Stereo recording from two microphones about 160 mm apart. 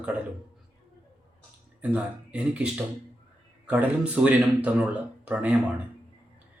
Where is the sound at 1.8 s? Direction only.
10° right (ahead or behind).